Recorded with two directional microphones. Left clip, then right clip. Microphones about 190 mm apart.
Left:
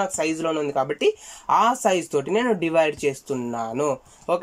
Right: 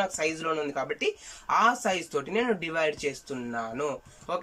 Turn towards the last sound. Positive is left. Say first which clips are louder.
# left 8 dB
turn(degrees=40)  # may be behind; listen again after turning